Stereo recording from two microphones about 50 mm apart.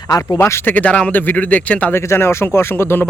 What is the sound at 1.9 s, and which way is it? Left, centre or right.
Speech, left.